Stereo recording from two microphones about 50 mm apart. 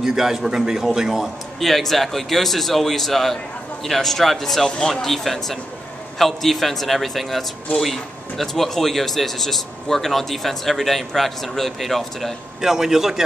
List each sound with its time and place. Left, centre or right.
0.0 s speech: centre
4.6 s speech: centre
5.0 s speech: centre
12.6 s a man's voice: centre